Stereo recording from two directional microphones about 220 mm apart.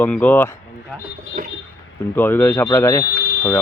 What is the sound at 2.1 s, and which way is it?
Speech, 10° left (ahead or behind).